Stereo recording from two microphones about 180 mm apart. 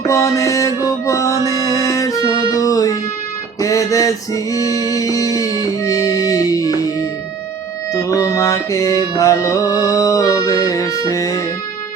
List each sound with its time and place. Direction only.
0.1 s music: 15° left (ahead or behind)
3.6 s a sound: 20° left (ahead or behind)
4.5 s music: 20° left (ahead or behind)